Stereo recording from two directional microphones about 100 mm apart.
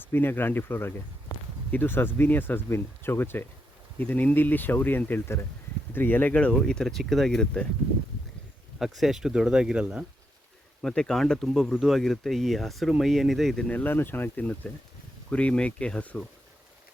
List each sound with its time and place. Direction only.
0.0 s speech: 20° left (ahead or behind)
8.8 s speech: 5° right (ahead or behind)
10.8 s speech: 5° left (ahead or behind)
13.7 s speech: 15° left (ahead or behind)